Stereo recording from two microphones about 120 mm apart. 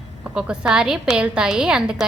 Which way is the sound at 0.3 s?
10° right (ahead or behind).